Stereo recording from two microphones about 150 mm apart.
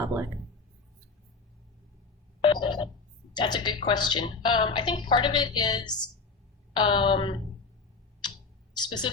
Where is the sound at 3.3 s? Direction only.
30° left (ahead or behind).